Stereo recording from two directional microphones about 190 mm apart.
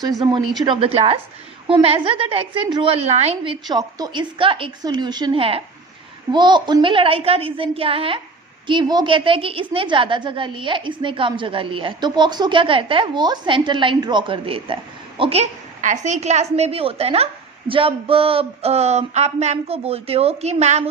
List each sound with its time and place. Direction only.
0.2 s a woman's voice: 20° right (ahead or behind)